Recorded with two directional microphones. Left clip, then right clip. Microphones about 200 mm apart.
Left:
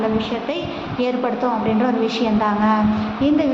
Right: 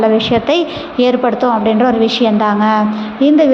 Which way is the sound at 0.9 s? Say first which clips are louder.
Right 9 dB; 30° right (ahead or behind).